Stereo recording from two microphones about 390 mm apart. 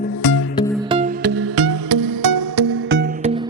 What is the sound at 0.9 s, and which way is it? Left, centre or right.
Music, centre.